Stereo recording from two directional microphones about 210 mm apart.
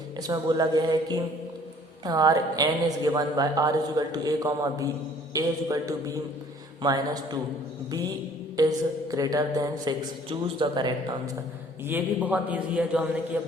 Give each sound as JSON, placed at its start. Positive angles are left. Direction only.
{"t": 0.2, "sound": "a woman's voice", "side_deg": -20}
{"t": 8.5, "sound": "a woman's voice", "side_deg": -15}
{"t": 11.9, "sound": "a woman's voice", "side_deg": -10}